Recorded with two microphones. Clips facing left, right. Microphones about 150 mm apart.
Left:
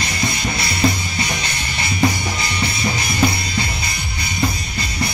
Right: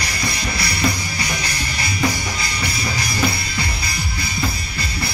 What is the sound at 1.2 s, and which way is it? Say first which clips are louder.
Music: even; 25° left (ahead or behind).